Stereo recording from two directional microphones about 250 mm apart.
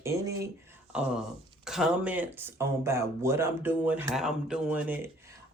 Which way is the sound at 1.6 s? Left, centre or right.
Centre.